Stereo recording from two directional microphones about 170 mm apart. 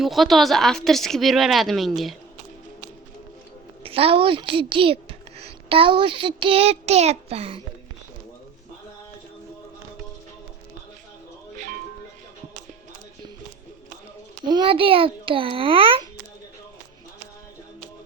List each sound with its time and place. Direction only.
0.0 s speech: centre (ahead or behind)
3.8 s a woman's voice: 35° right (ahead or behind)
11.5 s music: 50° right (ahead or behind)
14.4 s a child's voice: 30° right (ahead or behind)